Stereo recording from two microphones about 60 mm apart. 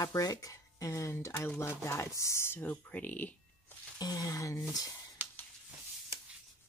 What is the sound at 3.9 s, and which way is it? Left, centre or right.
Speech, left.